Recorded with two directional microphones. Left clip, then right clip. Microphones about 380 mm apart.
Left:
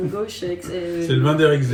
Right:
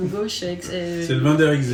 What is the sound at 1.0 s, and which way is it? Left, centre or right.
Speech, centre.